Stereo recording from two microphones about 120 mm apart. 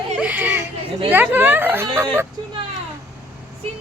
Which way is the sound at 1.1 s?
15° right (ahead or behind).